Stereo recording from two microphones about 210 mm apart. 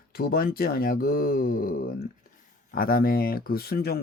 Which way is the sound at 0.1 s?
45° left (ahead or behind).